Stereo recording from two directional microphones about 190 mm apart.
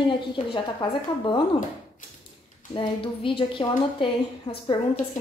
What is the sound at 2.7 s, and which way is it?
A woman's voice, 25° left (ahead or behind).